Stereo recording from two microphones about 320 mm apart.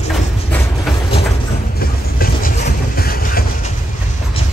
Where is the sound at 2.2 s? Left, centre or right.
Left.